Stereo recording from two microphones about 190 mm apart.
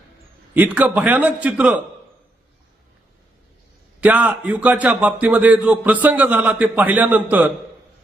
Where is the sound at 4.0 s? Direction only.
5° right (ahead or behind).